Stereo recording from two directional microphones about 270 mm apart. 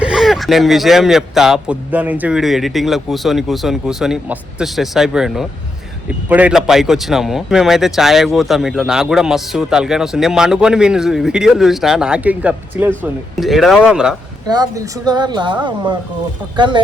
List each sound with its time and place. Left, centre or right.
0.0 s speech: centre
14.4 s speech: centre